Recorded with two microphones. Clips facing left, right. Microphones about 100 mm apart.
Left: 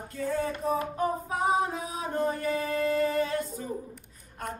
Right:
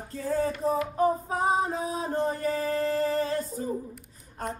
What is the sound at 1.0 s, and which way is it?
Music, 35° right (ahead or behind).